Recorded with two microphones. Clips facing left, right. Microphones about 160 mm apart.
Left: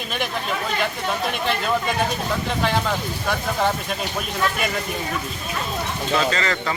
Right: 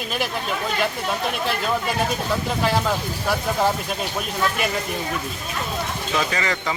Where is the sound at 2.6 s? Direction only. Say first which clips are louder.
Right 1 dB; 5° right (ahead or behind).